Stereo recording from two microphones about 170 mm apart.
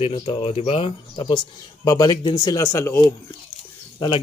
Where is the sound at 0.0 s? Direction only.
25° left (ahead or behind).